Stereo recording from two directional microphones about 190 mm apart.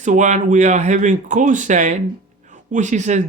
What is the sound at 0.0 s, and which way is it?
Speech, 40° right (ahead or behind).